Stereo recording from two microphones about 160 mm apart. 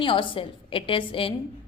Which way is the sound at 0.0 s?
30° left (ahead or behind).